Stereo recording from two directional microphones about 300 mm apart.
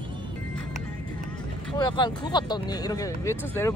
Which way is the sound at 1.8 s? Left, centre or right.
Centre.